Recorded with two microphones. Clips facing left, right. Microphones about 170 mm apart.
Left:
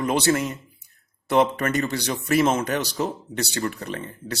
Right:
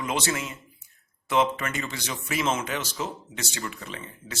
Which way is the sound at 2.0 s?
40° left (ahead or behind).